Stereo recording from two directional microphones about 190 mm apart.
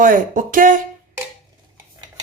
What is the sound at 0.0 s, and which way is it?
Speech, 45° right (ahead or behind).